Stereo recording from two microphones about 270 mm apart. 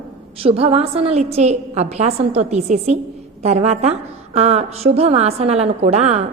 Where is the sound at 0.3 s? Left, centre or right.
Right.